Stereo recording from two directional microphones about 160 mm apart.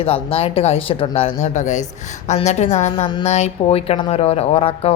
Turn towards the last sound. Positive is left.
turn(degrees=35)  # may be behind; listen again after turning